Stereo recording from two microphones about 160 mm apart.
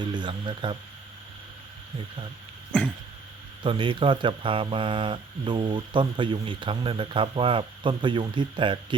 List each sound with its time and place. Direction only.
0.0 s speech: 30° right (ahead or behind)
3.6 s speech: 30° right (ahead or behind)